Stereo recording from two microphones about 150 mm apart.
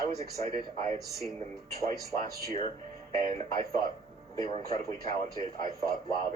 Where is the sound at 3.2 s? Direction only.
25° left (ahead or behind).